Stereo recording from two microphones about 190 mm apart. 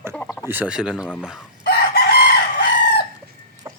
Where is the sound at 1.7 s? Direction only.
55° left (ahead or behind).